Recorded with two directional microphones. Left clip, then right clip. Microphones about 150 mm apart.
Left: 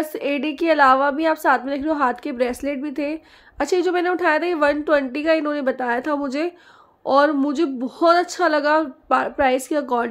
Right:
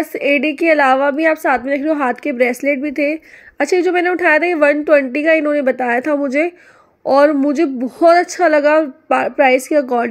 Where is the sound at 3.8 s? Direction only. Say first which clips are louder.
Right 5 dB; 15° right (ahead or behind).